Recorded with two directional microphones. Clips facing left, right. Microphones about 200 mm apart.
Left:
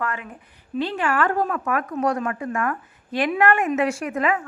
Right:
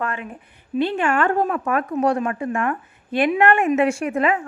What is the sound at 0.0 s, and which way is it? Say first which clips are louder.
A woman's voice: right 2 dB; 30° right (ahead or behind).